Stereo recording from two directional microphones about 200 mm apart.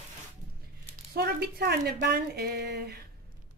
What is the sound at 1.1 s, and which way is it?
Speech, 55° right (ahead or behind).